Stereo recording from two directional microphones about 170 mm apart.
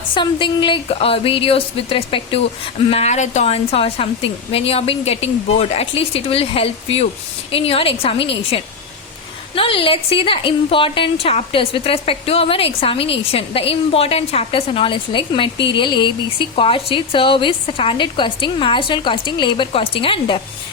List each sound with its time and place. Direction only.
0.1 s a woman's voice: 30° left (ahead or behind)